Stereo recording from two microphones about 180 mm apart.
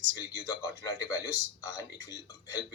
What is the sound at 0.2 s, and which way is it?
A man's voice, 20° left (ahead or behind).